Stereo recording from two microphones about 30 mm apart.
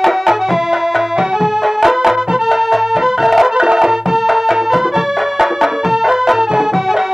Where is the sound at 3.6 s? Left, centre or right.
Right.